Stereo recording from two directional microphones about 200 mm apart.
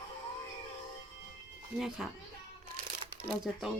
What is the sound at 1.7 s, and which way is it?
Speech, centre (ahead or behind).